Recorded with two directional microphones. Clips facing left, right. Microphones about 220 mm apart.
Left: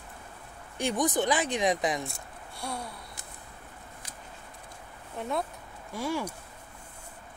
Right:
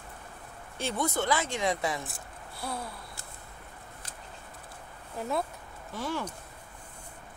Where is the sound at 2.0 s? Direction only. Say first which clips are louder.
Left 1 dB; centre (ahead or behind).